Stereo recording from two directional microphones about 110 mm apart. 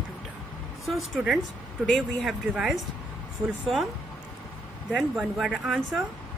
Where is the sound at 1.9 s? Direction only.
Centre (ahead or behind).